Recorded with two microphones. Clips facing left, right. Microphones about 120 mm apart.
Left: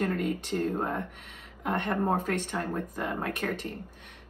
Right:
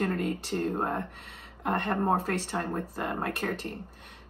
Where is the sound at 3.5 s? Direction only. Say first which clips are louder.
Even; 15° left (ahead or behind).